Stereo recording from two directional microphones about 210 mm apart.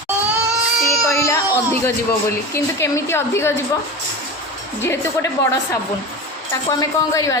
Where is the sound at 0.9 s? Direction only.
15° left (ahead or behind).